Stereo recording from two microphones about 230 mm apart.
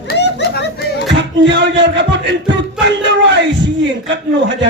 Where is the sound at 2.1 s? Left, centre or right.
Right.